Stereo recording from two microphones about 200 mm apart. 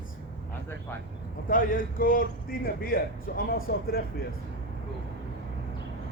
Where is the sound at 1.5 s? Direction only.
45° left (ahead or behind).